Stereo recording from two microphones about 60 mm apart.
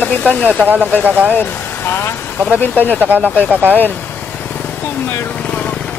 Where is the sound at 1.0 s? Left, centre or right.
Right.